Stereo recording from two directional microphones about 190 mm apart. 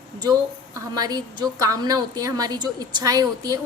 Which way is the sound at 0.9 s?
20° right (ahead or behind).